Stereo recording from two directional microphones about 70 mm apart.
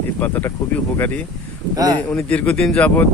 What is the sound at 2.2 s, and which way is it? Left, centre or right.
Speech, centre.